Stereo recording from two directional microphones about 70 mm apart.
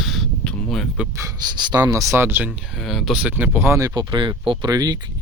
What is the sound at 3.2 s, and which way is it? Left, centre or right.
Speech, right.